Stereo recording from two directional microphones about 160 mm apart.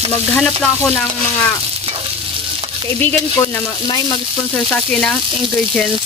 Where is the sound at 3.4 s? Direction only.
25° left (ahead or behind).